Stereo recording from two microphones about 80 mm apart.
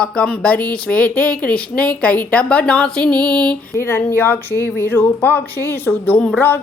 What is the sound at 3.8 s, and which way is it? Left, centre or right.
Speech, left.